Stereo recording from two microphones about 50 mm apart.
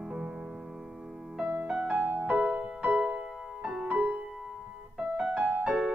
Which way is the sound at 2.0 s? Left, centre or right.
Right.